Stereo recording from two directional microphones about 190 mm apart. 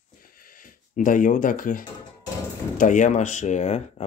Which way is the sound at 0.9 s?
45° left (ahead or behind).